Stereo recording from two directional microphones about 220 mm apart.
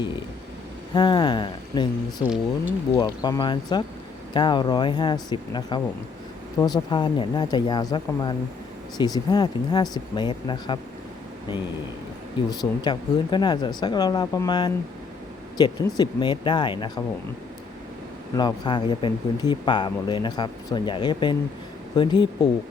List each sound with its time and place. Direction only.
0.9 s speech: 20° left (ahead or behind)
2.2 s speech: 5° right (ahead or behind)
2.9 s speech: 15° left (ahead or behind)
12.5 s speech: 20° left (ahead or behind)
18.3 s speech: 20° left (ahead or behind)